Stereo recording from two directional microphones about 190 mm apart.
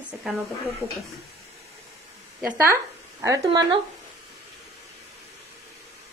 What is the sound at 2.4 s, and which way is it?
Speech, 10° right (ahead or behind).